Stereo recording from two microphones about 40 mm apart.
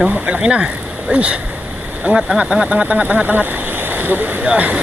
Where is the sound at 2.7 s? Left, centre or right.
Right.